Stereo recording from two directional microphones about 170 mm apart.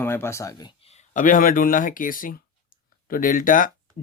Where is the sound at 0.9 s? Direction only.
45° left (ahead or behind).